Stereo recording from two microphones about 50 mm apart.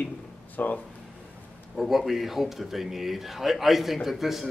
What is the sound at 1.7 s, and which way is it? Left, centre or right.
A man's voice, centre.